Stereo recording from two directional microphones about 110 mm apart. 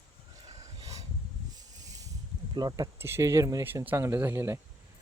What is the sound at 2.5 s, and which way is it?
Speech, 35° right (ahead or behind).